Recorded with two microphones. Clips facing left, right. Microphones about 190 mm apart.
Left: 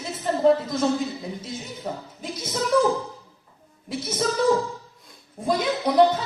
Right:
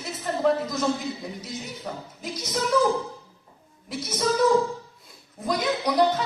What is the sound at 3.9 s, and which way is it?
Speech, 30° left (ahead or behind).